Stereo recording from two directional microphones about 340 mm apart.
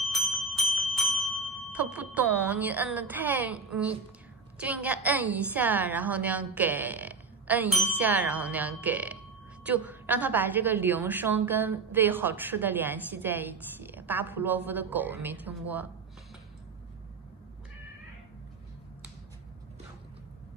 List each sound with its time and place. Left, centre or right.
0.1 s bell: centre
1.7 s a woman's voice: centre